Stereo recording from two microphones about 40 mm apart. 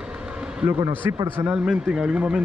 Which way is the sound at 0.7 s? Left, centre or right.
Right.